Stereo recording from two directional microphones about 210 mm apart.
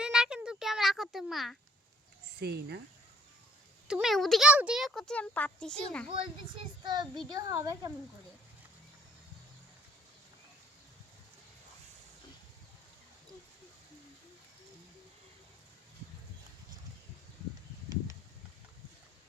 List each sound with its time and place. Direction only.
0.0 s a sound: 5° right (ahead or behind)
2.4 s speech: 50° right (ahead or behind)
3.8 s a child's voice: centre (ahead or behind)
6.1 s a child's voice: 25° right (ahead or behind)